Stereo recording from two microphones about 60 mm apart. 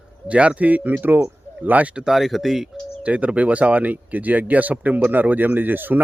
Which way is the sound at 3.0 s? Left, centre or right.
Right.